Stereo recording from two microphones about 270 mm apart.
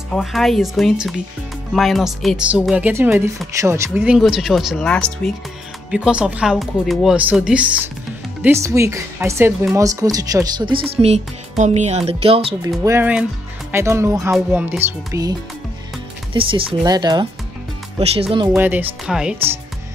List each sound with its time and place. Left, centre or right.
0.1 s speech: centre; by 12.7 s right
12.8 s speech: centre
16.3 s speech: centre
18.5 s speech: centre